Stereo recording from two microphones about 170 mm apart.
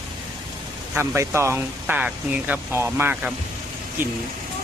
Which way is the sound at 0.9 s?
15° right (ahead or behind).